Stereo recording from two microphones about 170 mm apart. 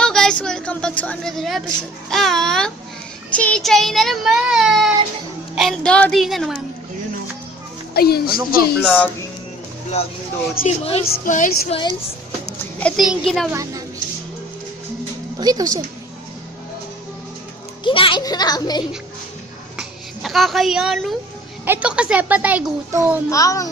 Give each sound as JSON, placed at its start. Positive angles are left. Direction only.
{"t": 0.0, "sound": "a woman's voice", "side_deg": 5}
{"t": 7.9, "sound": "a woman's voice", "side_deg": 65}
{"t": 8.8, "sound": "speech", "side_deg": 10}
{"t": 10.7, "sound": "speech", "side_deg": 35}
{"t": 11.3, "sound": "speech", "side_deg": 50}
{"t": 11.7, "sound": "speech", "side_deg": 25}
{"t": 12.8, "sound": "speech", "side_deg": 0}
{"t": 13.5, "sound": "speech", "side_deg": -20}
{"t": 15.4, "sound": "speech", "side_deg": -20}
{"t": 17.8, "sound": "speech", "side_deg": 30}
{"t": 19.7, "sound": "a sound", "side_deg": 0}
{"t": 21.6, "sound": "a child's voice", "side_deg": -10}
{"t": 23.3, "sound": "speech", "side_deg": 20}